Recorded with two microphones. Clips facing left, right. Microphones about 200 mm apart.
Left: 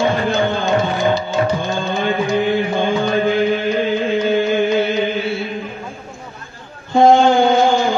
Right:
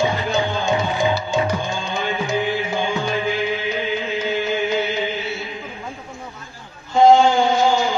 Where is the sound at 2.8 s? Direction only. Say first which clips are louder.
Left 6 dB; 55° left (ahead or behind).